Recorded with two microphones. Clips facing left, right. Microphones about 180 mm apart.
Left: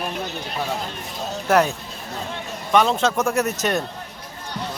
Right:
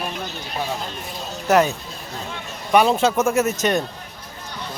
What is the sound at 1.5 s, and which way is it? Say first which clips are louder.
Speech: right 1 dB; centre (ahead or behind).